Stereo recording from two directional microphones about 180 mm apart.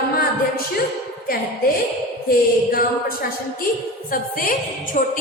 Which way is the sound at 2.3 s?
60° left (ahead or behind).